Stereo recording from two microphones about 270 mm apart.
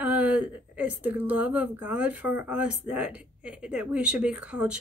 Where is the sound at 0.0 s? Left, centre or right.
Centre.